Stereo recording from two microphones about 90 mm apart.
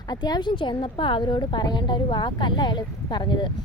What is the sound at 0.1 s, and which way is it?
A woman's voice, 50° left (ahead or behind).